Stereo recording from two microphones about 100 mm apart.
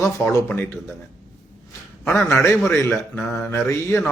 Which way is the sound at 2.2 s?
25° left (ahead or behind).